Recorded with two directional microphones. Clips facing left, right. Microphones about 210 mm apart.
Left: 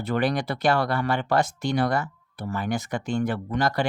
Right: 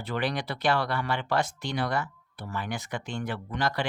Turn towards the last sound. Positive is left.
turn(degrees=45)  # may be behind; listen again after turning